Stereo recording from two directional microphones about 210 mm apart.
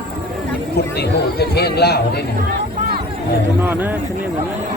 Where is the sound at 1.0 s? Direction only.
50° left (ahead or behind).